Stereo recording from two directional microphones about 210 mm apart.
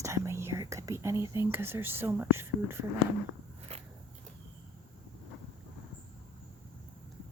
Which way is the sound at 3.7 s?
30° right (ahead or behind).